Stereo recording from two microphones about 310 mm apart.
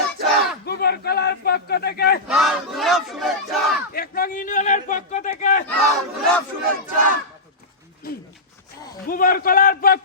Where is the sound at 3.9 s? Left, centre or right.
Left.